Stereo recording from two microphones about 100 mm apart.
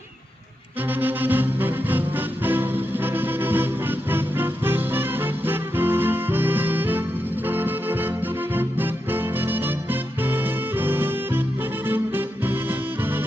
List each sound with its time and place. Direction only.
0.9 s music: 20° right (ahead or behind)